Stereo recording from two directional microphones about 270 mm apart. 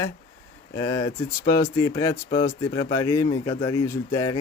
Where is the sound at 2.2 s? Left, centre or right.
Left.